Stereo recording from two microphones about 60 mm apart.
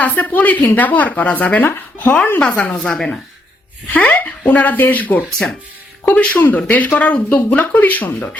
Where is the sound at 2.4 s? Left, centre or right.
Left.